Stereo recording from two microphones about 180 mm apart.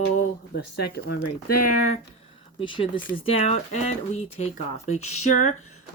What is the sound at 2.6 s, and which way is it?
Speech, 30° left (ahead or behind).